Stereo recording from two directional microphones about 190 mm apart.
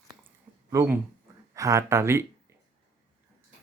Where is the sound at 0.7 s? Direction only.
15° right (ahead or behind).